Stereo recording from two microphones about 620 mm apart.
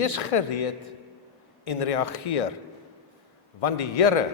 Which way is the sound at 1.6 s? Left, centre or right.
Left.